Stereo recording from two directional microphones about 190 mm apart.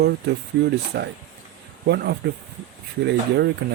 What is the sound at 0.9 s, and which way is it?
Speech, 65° right (ahead or behind).